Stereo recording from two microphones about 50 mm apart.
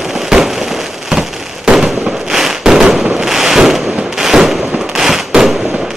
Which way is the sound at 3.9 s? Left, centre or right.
Centre.